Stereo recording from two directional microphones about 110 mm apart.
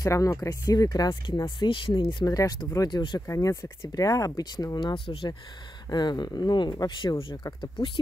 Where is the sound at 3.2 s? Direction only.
30° left (ahead or behind); by 5.3 s 55° left (ahead or behind).